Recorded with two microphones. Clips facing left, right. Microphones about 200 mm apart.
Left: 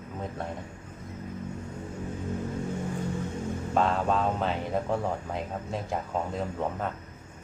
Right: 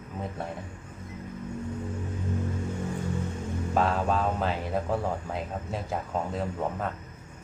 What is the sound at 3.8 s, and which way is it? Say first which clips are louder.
Speech: even; 5° right (ahead or behind).